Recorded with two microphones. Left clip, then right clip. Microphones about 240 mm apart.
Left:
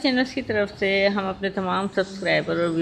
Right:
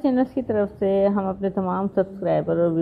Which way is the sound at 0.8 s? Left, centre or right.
Centre.